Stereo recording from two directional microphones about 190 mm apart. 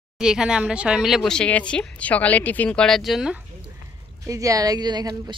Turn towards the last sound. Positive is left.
turn(degrees=-20)  # may be behind; listen again after turning